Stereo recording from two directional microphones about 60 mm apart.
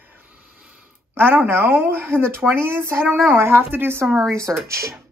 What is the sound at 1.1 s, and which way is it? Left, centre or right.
A woman's voice, right.